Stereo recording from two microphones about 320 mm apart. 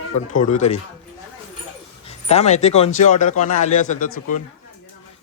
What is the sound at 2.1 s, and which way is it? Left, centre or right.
Speech, centre.